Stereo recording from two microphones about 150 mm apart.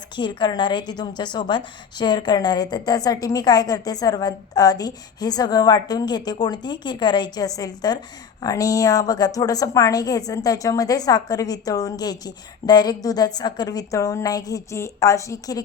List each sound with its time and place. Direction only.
0.2 s a woman's voice: 30° left (ahead or behind)